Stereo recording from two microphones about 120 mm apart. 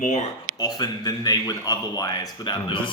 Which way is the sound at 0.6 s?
35° left (ahead or behind).